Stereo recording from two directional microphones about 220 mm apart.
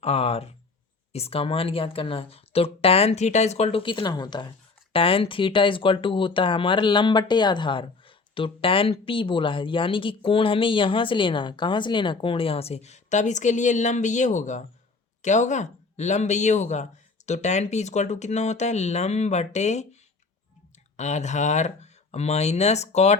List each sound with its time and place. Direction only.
0.0 s speech: 25° left (ahead or behind)